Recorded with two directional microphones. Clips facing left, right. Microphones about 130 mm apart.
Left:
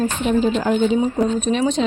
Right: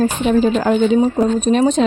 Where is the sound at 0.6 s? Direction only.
80° right.